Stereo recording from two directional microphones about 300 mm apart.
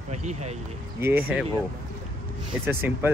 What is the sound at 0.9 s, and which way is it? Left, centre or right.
Speech, centre.